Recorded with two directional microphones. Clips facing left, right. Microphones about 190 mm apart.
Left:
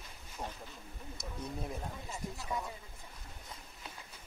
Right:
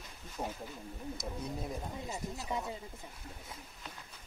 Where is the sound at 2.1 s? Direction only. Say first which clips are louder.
Right 1 dB; 25° right (ahead or behind).